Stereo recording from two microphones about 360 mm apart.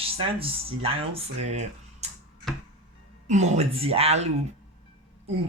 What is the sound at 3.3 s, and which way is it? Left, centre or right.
Speech, centre.